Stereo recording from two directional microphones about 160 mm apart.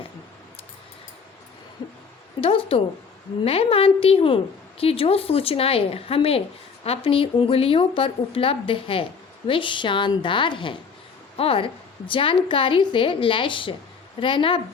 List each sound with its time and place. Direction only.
2.4 s a woman's voice: 35° left (ahead or behind)